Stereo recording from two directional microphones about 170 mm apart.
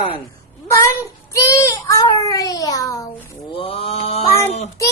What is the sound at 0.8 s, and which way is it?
Child singing, 15° left (ahead or behind).